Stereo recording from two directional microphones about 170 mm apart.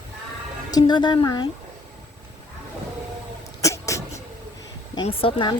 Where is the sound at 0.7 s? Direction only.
25° left (ahead or behind).